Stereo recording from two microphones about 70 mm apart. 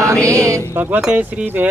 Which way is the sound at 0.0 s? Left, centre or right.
Right.